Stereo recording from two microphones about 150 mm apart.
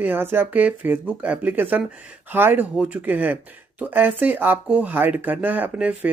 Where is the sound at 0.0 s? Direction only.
15° right (ahead or behind).